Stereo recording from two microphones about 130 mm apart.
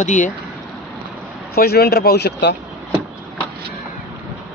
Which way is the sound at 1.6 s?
90° left.